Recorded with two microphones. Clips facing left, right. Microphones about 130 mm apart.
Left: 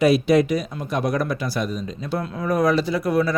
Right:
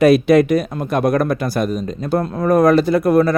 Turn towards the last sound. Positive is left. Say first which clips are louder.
# right 7 dB
turn(degrees=-50)  # may be behind; listen again after turning